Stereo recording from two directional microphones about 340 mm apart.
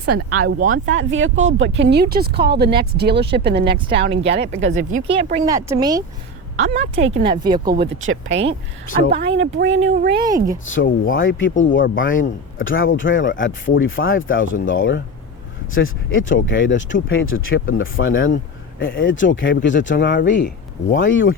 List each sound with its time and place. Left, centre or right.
0.0 s speech: right
5.0 s speech: centre
7.8 s speech: right
10.7 s speech: left